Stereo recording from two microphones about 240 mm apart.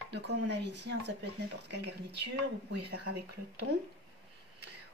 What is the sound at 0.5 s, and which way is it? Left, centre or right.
Speech, right.